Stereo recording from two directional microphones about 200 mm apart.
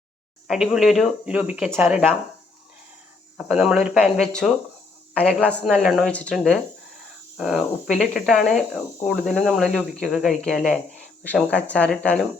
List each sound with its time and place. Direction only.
0.4 s speech: 5° right (ahead or behind)
3.3 s speech: 5° right (ahead or behind)